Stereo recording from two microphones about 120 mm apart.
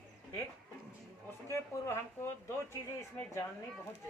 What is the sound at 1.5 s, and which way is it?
Speech, 20° left (ahead or behind).